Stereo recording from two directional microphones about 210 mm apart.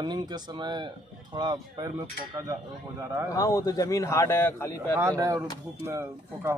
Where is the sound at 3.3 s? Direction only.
15° left (ahead or behind).